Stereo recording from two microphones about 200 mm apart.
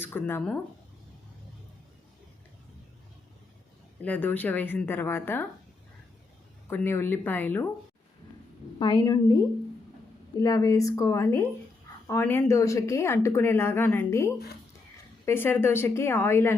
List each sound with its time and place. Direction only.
0.0 s a woman's voice: 10° left (ahead or behind)
4.0 s a woman's voice: 10° left (ahead or behind)
6.7 s a woman's voice: 10° left (ahead or behind)
8.8 s a woman's voice: 20° left (ahead or behind)